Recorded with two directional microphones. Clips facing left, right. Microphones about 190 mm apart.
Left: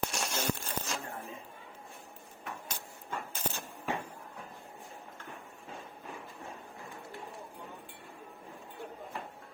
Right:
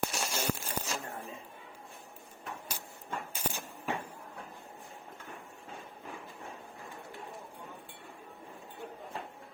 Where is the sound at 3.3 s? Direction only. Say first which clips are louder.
Even; 10° right (ahead or behind).